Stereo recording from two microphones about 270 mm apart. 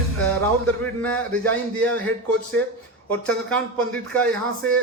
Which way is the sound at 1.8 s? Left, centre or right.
Centre.